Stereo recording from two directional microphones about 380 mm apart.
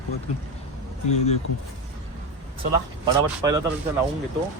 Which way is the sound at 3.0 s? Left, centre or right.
Centre.